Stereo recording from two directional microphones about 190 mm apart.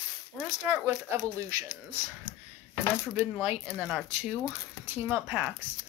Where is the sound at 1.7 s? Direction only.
5° right (ahead or behind).